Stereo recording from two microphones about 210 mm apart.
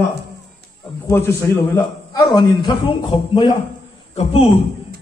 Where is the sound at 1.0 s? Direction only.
15° left (ahead or behind).